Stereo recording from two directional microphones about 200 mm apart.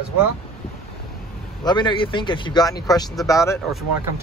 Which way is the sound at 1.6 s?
25° left (ahead or behind).